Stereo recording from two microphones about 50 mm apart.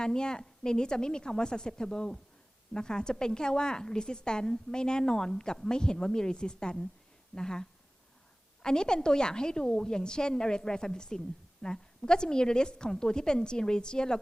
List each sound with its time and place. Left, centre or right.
0.0 s a woman's voice: centre